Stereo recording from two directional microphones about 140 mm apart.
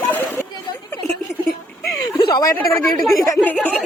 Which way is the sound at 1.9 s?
25° left (ahead or behind).